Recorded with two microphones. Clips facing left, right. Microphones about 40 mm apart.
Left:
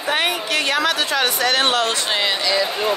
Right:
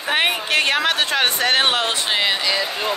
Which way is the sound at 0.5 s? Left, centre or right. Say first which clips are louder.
Right 1 dB; right.